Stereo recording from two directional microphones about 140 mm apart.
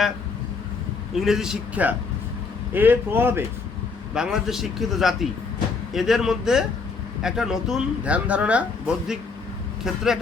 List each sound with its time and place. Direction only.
1.1 s a man's voice: 5° right (ahead or behind)
4.1 s speech: 5° right (ahead or behind)